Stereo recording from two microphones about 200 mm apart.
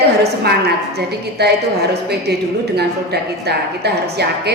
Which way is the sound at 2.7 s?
55° right (ahead or behind).